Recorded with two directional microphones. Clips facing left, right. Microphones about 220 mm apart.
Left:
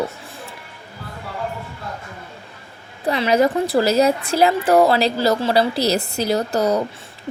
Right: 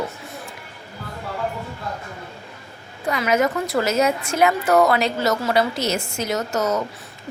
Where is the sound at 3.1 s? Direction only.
30° left (ahead or behind).